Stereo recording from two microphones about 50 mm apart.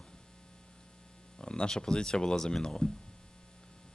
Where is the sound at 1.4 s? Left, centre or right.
Centre.